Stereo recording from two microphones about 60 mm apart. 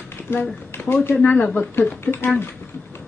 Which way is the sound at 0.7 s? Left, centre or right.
Left.